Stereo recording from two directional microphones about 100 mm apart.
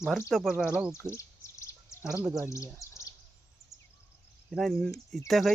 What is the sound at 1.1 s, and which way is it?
Bird, 30° left (ahead or behind).